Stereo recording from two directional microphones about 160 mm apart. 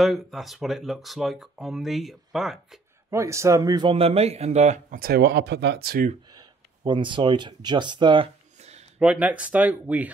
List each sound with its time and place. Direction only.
0.0 s speech: centre (ahead or behind)
3.1 s speech: 20° right (ahead or behind); by 5.0 s 45° right (ahead or behind)
5.0 s speech: 85° right
6.3 s a sound: 30° right (ahead or behind)
9.0 s speech: 10° right (ahead or behind)